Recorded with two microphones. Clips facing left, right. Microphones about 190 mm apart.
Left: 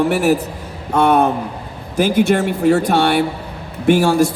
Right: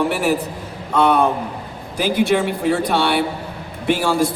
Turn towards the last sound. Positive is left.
turn(degrees=45)  # may be behind; listen again after turning